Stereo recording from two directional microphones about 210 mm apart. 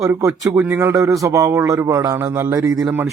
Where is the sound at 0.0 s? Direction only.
15° right (ahead or behind).